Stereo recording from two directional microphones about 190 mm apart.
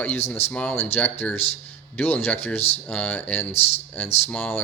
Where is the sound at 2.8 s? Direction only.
5° left (ahead or behind).